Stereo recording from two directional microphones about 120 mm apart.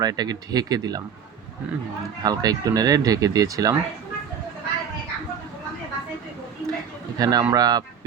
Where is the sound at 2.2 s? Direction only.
30° right (ahead or behind).